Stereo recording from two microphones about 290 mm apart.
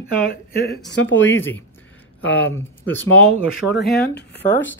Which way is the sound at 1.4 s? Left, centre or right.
Centre.